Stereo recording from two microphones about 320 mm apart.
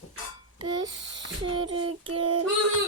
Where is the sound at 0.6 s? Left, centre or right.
Centre.